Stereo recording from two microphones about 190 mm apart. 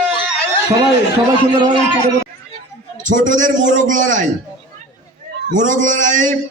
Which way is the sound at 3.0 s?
40° right (ahead or behind).